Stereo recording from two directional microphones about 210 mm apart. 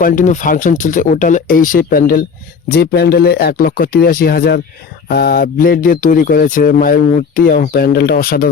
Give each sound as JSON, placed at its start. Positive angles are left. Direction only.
{"t": 0.0, "sound": "speech", "side_deg": 35}